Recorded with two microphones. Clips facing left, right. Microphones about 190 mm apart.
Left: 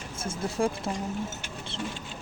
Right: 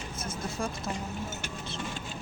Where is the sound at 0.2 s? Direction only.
30° left (ahead or behind).